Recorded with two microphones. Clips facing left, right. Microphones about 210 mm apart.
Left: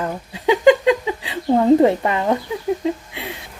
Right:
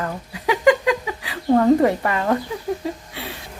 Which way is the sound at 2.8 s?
20° left (ahead or behind).